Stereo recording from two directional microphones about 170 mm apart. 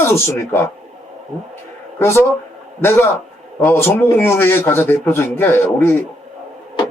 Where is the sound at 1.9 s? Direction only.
15° left (ahead or behind).